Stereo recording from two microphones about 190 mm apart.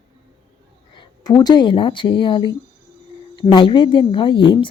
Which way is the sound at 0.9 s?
20° left (ahead or behind).